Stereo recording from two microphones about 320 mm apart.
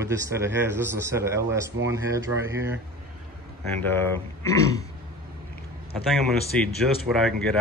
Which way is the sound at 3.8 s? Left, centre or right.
Centre.